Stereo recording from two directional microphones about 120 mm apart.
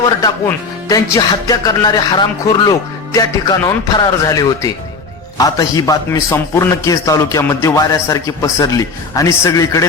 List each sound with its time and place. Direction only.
0.0 s a man's voice: 30° left (ahead or behind)